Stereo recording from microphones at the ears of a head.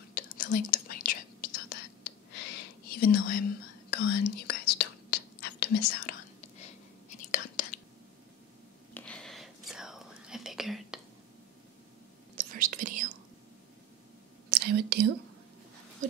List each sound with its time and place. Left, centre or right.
0.1 s whispering: left
8.9 s whispering: centre
12.4 s whispering: right
14.5 s whispering: right